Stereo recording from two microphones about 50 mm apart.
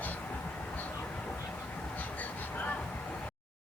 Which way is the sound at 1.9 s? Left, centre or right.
Left.